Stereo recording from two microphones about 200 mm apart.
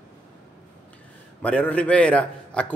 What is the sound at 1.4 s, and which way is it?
A man's voice, 5° left (ahead or behind).